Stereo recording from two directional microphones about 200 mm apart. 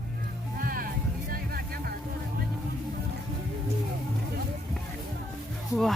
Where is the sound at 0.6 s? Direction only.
45° right (ahead or behind).